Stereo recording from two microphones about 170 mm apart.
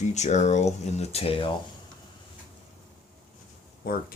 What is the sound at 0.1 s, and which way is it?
Speech, 45° left (ahead or behind).